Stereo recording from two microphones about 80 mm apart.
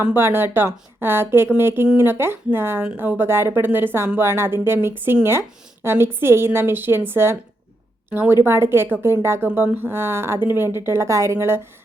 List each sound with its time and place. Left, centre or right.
0.1 s a woman's voice: right